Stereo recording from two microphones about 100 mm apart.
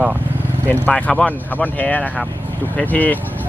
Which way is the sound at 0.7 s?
15° left (ahead or behind).